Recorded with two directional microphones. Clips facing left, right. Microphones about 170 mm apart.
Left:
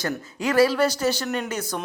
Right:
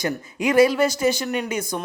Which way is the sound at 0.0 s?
15° right (ahead or behind).